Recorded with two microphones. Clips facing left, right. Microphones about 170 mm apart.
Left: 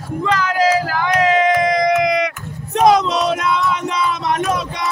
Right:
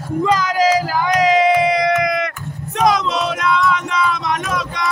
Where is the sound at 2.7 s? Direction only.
30° left (ahead or behind).